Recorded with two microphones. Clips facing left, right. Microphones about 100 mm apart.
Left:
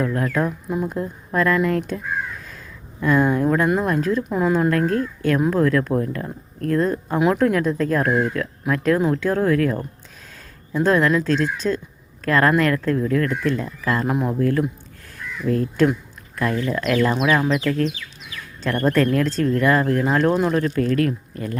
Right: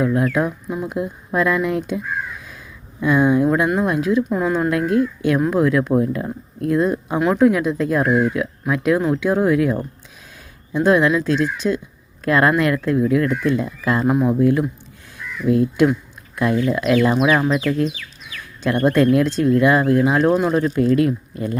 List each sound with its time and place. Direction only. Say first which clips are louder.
0.0 s speech: right 3 dB; 10° right (ahead or behind)
3.0 s speech: right 2 dB; 5° right (ahead or behind)
4.7 s speech: right 2 dB; 10° right (ahead or behind)
10.8 s speech: right 2 dB; 10° right (ahead or behind)
14.1 s speech: right 5 dB; centre (ahead or behind)
14.3 s speech: right 3 dB; 15° right (ahead or behind)
20.5 s speech: right 3 dB; 20° right (ahead or behind)